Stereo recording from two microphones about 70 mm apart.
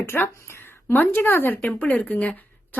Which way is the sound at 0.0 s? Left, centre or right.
Left.